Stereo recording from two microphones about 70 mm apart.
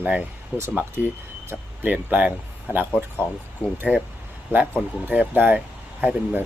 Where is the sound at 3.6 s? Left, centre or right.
Left.